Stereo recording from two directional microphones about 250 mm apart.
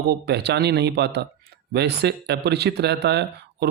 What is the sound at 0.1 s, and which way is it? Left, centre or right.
Speech, right.